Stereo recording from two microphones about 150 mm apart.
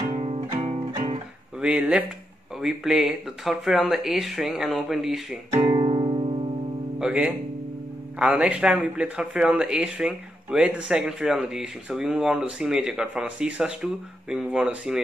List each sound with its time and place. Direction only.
0.1 s music: 40° right (ahead or behind)
1.6 s speech: 5° right (ahead or behind)
5.5 s music: 35° right (ahead or behind)
7.0 s speech: 5° right (ahead or behind)